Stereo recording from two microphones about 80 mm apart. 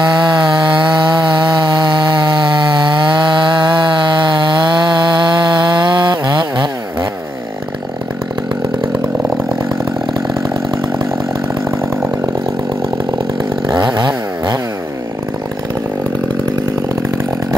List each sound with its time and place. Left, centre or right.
0.2 s chainsaw: right
13.7 s chainsaw: right